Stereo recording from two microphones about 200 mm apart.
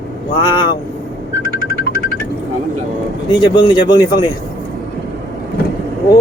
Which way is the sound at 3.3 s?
25° left (ahead or behind).